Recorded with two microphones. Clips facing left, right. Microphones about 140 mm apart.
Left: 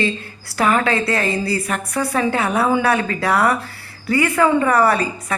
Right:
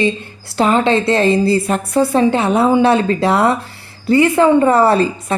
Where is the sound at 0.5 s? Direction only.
25° right (ahead or behind).